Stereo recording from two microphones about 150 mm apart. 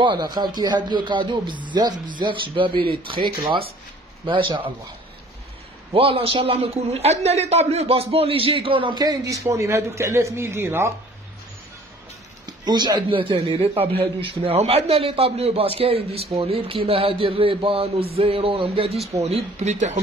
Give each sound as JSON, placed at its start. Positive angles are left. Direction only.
{"t": 0.0, "sound": "a man's voice", "side_deg": -30}
{"t": 5.9, "sound": "a man's voice", "side_deg": -40}
{"t": 12.4, "sound": "a man's voice", "side_deg": -30}